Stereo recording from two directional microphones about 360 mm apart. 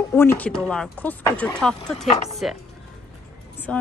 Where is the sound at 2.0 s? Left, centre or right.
Centre.